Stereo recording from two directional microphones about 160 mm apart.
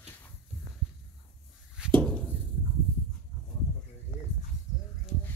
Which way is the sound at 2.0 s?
5° left (ahead or behind).